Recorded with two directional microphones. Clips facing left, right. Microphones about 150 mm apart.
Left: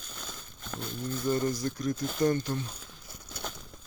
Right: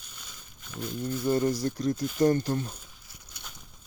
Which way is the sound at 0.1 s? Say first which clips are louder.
Left 7 dB; 75° left (ahead or behind).